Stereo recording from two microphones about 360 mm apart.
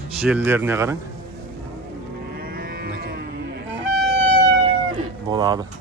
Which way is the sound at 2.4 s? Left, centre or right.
Right.